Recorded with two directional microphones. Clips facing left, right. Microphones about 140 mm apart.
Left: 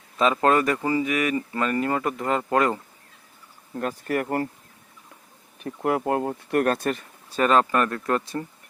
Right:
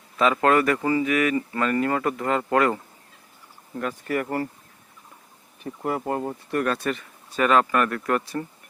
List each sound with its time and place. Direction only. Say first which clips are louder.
0.2 s speech: even; 25° left (ahead or behind)
3.8 s speech: left 1 dB; 40° left (ahead or behind)
5.8 s speech: left 3 dB; 60° left (ahead or behind); by 8.4 s 25° left (ahead or behind)